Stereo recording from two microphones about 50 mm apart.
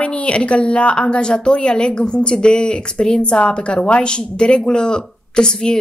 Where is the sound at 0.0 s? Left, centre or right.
Left.